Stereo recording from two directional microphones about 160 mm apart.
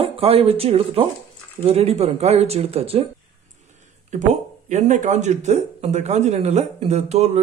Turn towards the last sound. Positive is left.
turn(degrees=-45)  # may be behind; listen again after turning